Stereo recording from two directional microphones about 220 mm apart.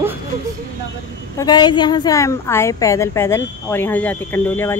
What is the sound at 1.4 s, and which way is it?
A woman's voice, 20° left (ahead or behind).